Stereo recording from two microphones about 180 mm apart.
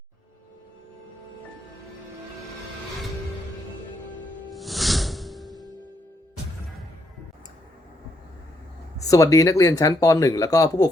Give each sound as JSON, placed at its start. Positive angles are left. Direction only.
{"t": 4.5, "sound": "music", "side_deg": 0}
{"t": 9.0, "sound": "speech", "side_deg": 20}